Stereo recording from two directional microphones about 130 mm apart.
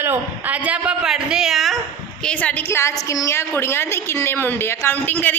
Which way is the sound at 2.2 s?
10° left (ahead or behind).